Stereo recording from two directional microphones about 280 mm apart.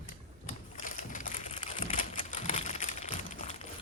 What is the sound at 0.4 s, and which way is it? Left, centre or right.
Crushing, left.